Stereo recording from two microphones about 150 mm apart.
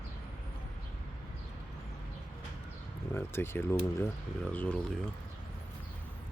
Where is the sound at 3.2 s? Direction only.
15° left (ahead or behind).